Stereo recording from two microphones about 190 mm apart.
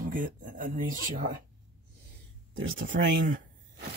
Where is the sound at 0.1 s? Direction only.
45° right (ahead or behind).